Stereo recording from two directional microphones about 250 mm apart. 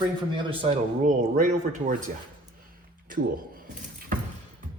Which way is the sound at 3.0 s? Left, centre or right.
Right.